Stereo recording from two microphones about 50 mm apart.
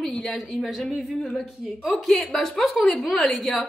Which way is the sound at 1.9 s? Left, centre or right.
Centre.